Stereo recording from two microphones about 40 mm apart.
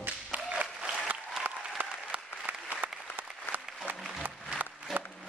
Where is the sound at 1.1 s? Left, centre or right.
Right.